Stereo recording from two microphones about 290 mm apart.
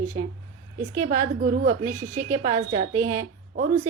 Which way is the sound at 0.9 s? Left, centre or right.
Right.